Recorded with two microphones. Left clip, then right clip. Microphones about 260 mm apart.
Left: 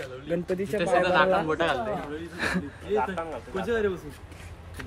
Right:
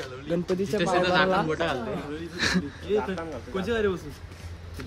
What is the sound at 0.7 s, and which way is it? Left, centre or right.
Speech, centre.